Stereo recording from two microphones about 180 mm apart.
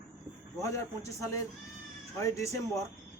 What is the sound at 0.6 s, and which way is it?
A man's voice, 15° left (ahead or behind).